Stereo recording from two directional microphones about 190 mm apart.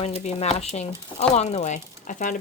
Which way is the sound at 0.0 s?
35° left (ahead or behind).